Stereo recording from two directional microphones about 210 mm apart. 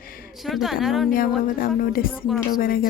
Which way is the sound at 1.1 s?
40° left (ahead or behind).